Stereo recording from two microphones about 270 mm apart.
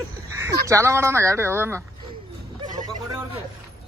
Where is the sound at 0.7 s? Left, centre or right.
Centre.